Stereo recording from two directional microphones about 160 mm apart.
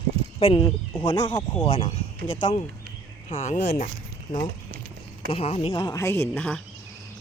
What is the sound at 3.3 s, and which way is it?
Speech, 50° left (ahead or behind).